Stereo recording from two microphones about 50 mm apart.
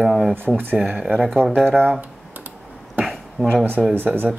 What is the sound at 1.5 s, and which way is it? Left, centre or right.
Speech, right.